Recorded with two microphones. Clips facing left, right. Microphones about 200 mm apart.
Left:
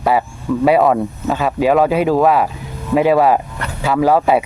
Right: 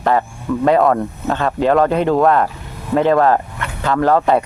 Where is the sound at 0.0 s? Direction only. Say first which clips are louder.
Even; 10° left (ahead or behind).